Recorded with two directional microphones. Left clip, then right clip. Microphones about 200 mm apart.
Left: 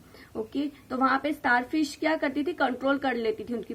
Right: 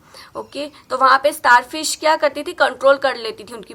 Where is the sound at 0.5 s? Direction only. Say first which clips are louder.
Right 10 dB; 30° left (ahead or behind).